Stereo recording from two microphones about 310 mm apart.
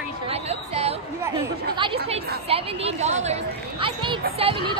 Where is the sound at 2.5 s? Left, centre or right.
Centre.